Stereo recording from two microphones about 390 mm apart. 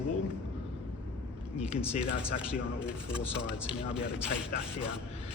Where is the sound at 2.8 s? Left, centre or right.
Centre.